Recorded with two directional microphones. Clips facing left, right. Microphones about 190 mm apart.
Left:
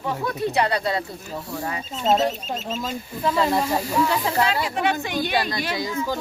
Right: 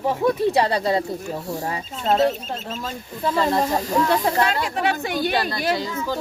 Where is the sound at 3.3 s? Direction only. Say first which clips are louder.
Right 2 dB; 10° left (ahead or behind).